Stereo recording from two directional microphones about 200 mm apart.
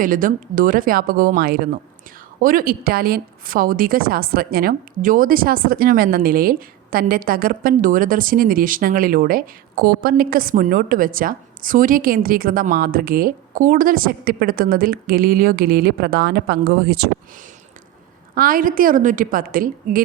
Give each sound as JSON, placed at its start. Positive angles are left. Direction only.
{"t": 0.0, "sound": "a woman's voice", "side_deg": -45}
{"t": 18.3, "sound": "a woman's voice", "side_deg": -45}